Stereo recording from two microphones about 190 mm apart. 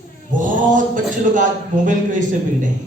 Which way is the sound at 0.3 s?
45° right (ahead or behind).